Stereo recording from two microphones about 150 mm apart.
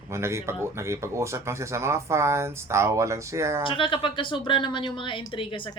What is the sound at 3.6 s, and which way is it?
A woman's voice, 35° left (ahead or behind).